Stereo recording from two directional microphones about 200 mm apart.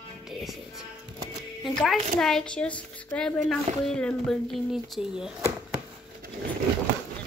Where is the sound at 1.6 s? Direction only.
Centre (ahead or behind).